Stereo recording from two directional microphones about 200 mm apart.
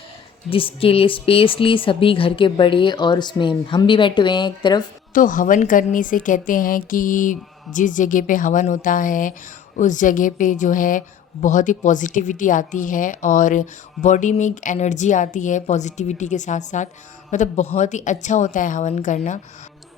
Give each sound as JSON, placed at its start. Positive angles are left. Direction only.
{"t": 0.5, "sound": "speech", "side_deg": 25}
{"t": 5.1, "sound": "a woman's voice", "side_deg": 40}